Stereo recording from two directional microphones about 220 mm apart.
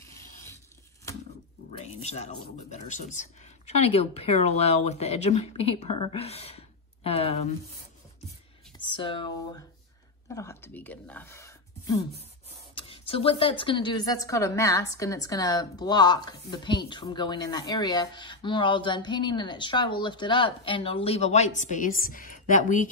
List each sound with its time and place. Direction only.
0.0 s a sound: 15° left (ahead or behind)
1.8 s a woman's voice: 30° left (ahead or behind)
8.7 s a woman's voice: 20° left (ahead or behind)